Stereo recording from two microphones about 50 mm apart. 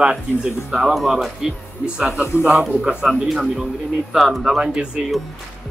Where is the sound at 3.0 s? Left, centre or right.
Centre.